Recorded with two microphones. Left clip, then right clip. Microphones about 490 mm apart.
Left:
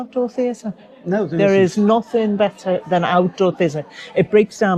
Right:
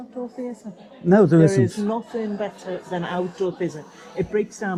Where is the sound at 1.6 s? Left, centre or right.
Left.